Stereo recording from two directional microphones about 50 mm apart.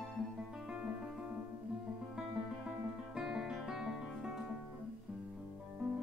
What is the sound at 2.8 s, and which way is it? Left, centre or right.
Music, centre.